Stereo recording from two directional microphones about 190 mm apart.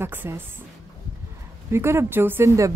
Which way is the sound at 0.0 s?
10° right (ahead or behind).